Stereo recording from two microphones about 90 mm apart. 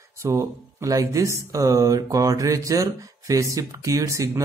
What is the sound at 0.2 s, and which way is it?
Speech, 30° right (ahead or behind).